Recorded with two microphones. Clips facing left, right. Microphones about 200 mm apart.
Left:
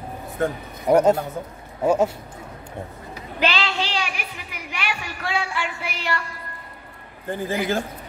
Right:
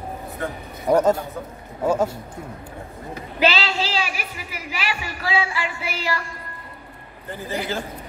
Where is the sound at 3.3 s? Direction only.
5° right (ahead or behind).